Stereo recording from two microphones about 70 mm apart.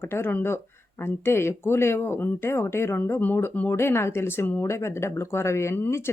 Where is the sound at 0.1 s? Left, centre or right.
Left.